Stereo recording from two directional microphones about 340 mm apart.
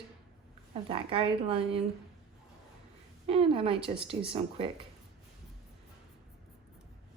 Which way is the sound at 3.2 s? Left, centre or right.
Centre.